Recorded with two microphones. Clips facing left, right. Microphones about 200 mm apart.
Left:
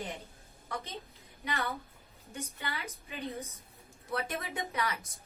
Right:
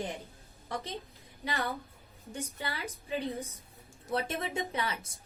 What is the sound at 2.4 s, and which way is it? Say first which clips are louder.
A woman's voice: right 2 dB; 30° right (ahead or behind).